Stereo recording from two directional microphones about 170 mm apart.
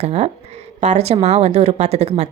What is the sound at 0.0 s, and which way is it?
Speech, 40° right (ahead or behind).